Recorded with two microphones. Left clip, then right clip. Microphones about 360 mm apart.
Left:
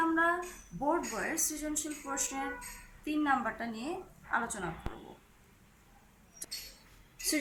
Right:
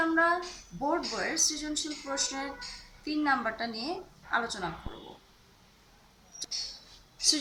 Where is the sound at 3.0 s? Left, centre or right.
Centre.